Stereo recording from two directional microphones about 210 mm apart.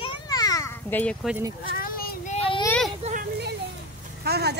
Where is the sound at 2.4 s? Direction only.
25° left (ahead or behind).